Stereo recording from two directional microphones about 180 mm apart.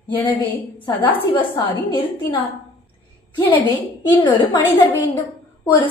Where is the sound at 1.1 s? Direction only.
25° left (ahead or behind).